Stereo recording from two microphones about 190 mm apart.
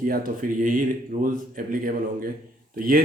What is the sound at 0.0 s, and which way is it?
Speech, 45° right (ahead or behind).